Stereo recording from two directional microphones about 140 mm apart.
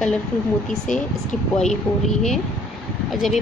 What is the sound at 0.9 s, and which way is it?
Speech, 65° left (ahead or behind).